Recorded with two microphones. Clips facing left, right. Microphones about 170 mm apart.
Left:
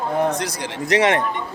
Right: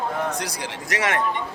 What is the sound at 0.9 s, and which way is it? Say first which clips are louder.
Speech: left 7 dB; 20° left (ahead or behind).